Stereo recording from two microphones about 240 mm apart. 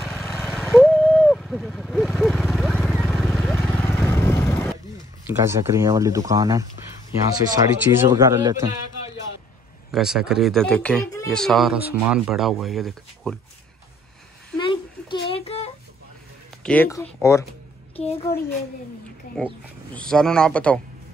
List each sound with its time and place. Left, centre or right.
0.0 s vehicle: centre
5.2 s speech: centre
9.8 s speech: centre
14.6 s a sound: centre
16.6 s speech: centre
19.3 s speech: centre